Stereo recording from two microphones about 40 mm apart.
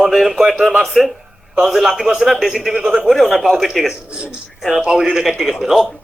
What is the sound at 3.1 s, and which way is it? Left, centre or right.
Speech, centre.